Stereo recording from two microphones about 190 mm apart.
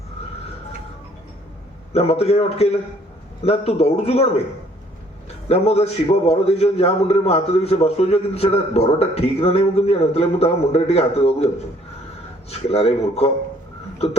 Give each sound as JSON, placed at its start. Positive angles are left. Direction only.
{"t": 1.9, "sound": "a man's voice", "side_deg": 35}
{"t": 5.5, "sound": "a man's voice", "side_deg": 35}
{"t": 12.5, "sound": "a man's voice", "side_deg": 35}